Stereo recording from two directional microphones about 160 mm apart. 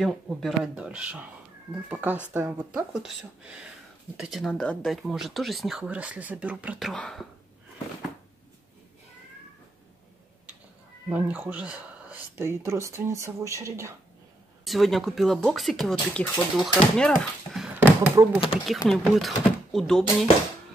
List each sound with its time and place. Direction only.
0.0 s speech: centre (ahead or behind)
6.9 s speech: 5° left (ahead or behind)
11.1 s speech: 10° right (ahead or behind)
14.6 s speech: centre (ahead or behind)
17.7 s a sound: 10° right (ahead or behind)
18.9 s speech: centre (ahead or behind)